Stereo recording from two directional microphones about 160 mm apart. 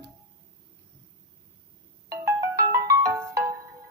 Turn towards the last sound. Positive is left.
turn(degrees=-20)  # may be behind; listen again after turning